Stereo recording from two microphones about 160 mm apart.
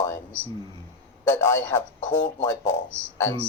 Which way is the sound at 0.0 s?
15° left (ahead or behind).